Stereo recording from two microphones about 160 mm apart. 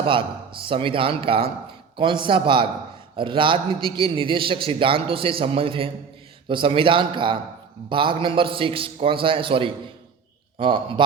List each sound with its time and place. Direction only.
0.0 s a man's voice: 35° right (ahead or behind)